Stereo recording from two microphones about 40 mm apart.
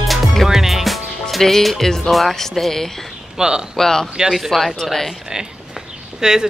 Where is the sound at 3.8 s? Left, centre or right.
Centre.